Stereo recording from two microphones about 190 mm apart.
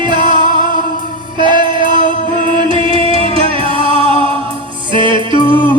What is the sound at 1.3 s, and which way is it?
Music, 25° right (ahead or behind).